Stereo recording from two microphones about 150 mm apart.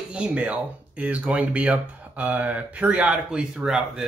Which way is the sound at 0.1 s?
10° right (ahead or behind).